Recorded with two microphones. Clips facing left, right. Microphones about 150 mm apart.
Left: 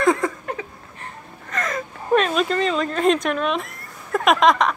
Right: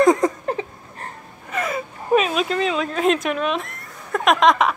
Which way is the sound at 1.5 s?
10° right (ahead or behind).